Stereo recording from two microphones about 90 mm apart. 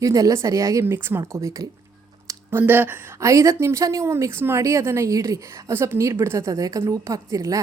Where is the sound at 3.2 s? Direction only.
35° right (ahead or behind).